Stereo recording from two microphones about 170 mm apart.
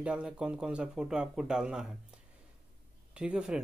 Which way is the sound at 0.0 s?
5° right (ahead or behind).